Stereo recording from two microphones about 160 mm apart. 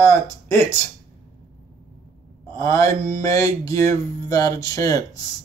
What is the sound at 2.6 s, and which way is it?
Mantra, 20° left (ahead or behind).